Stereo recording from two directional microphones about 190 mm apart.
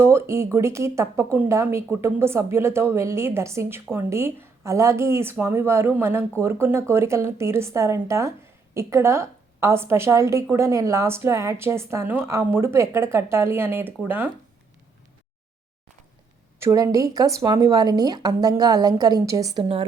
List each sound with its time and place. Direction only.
0.0 s a woman's voice: 15° right (ahead or behind)
16.6 s a woman's voice: 15° right (ahead or behind)